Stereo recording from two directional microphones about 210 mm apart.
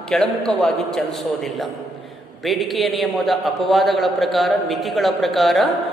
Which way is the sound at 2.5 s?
Centre (ahead or behind).